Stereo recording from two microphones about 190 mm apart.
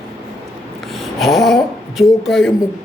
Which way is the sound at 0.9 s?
Centre (ahead or behind).